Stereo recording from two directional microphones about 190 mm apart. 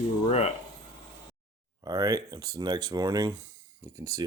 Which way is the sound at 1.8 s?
20° right (ahead or behind).